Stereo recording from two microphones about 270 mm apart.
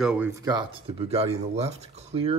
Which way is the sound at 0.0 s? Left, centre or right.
Centre.